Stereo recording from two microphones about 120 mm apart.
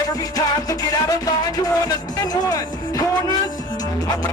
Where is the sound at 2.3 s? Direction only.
30° left (ahead or behind).